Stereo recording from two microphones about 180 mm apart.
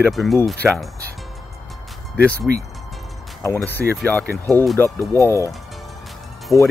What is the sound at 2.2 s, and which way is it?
Speech, 5° left (ahead or behind).